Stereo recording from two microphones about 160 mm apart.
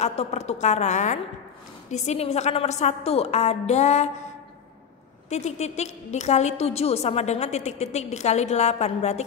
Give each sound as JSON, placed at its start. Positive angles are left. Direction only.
{"t": 0.0, "sound": "a woman's voice", "side_deg": 45}
{"t": 5.3, "sound": "a woman's voice", "side_deg": 45}